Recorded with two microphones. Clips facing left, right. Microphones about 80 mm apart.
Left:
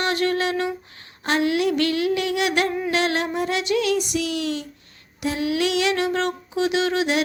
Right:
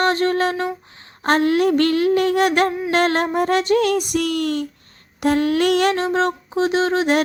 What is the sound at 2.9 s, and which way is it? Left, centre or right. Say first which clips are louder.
Music: right 5 dB; right.